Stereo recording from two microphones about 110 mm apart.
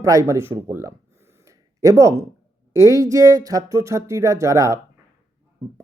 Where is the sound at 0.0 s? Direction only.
30° right (ahead or behind).